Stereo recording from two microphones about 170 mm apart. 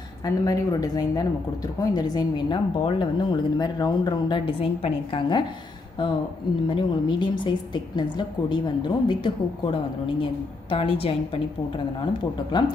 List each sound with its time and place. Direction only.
0.2 s a woman's voice: 20° left (ahead or behind)
6.7 s a woman's voice: 25° left (ahead or behind)
12.5 s a woman's voice: 25° left (ahead or behind)